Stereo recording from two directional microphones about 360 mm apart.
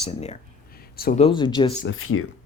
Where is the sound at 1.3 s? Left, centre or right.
Centre.